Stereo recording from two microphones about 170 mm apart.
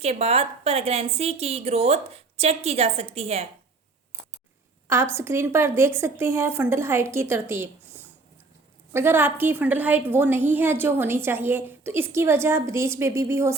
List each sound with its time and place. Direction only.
0.0 s a woman's voice: 35° right (ahead or behind)
4.9 s a woman's voice: 15° right (ahead or behind)